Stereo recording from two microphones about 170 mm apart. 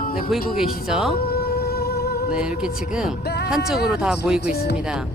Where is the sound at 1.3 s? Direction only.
65° left (ahead or behind).